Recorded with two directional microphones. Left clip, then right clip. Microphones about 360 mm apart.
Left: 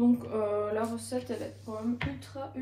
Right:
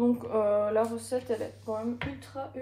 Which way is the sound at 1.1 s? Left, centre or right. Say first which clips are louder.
Right 4 dB; right.